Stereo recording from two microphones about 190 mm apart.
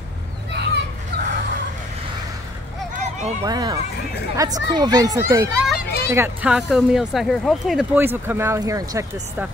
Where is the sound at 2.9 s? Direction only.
35° right (ahead or behind).